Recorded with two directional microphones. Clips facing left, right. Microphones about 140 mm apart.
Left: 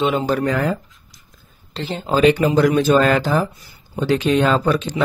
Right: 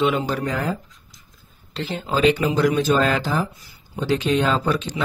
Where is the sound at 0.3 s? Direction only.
70° left (ahead or behind).